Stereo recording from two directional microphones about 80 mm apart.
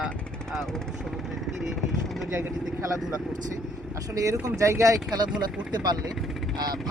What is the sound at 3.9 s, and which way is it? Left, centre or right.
Speech, right.